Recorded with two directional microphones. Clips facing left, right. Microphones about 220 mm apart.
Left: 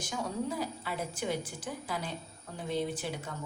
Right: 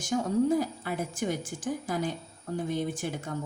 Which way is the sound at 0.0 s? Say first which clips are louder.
Right 9 dB; 45° right (ahead or behind).